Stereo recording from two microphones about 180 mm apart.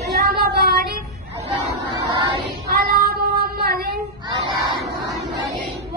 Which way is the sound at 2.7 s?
60° right (ahead or behind).